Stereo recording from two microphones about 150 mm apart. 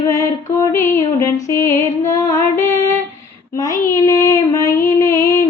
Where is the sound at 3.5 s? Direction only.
20° left (ahead or behind).